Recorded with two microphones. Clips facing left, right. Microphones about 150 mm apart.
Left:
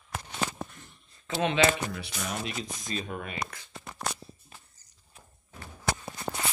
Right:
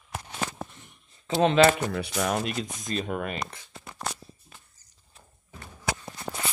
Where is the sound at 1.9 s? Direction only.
65° right (ahead or behind).